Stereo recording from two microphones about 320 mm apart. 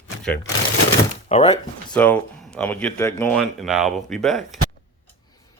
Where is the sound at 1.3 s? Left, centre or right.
Centre.